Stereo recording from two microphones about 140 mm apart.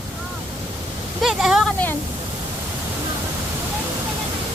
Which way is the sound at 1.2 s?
Centre (ahead or behind).